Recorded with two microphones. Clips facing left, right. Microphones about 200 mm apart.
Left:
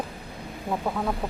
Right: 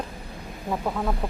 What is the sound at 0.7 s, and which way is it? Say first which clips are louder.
Speech: even; centre (ahead or behind).